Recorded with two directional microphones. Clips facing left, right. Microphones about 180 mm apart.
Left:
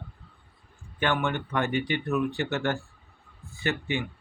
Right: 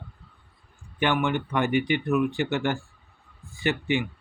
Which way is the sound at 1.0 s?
15° right (ahead or behind).